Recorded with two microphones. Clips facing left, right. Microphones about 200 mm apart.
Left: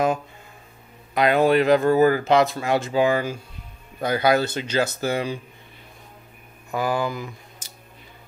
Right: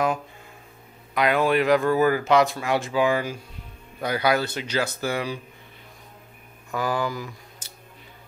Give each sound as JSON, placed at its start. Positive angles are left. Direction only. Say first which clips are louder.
{"t": 1.1, "sound": "speech", "louder": "left 3 dB", "side_deg": 30}
{"t": 6.7, "sound": "speech", "louder": "left 2 dB", "side_deg": 10}
{"t": 7.0, "sound": "speech", "louder": "left 1 dB", "side_deg": 20}